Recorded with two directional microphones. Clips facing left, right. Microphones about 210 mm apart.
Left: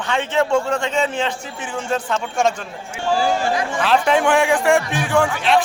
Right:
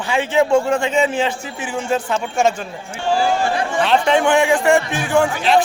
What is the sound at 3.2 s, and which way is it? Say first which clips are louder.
Speech: right 1 dB; 40° left (ahead or behind).